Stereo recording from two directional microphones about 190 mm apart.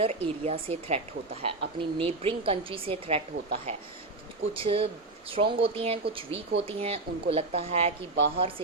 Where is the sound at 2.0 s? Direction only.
30° right (ahead or behind).